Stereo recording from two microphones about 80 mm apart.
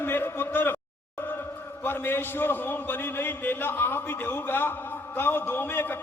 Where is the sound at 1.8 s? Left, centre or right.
Left.